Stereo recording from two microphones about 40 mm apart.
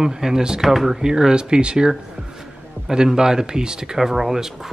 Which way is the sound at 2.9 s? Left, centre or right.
Centre.